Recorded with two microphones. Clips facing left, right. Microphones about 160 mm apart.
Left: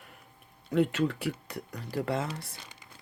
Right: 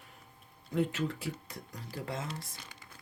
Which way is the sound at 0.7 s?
70° left (ahead or behind).